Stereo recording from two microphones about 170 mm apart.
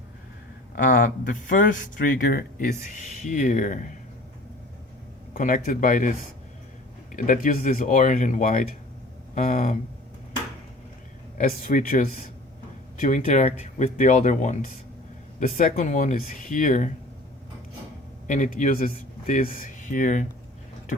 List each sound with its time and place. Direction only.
0.8 s speech: 50° left (ahead or behind)
5.3 s speech: 55° left (ahead or behind)
11.3 s speech: 50° left (ahead or behind)
18.3 s speech: 50° left (ahead or behind)